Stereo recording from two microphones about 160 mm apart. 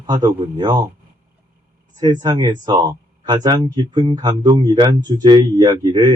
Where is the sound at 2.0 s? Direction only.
25° right (ahead or behind).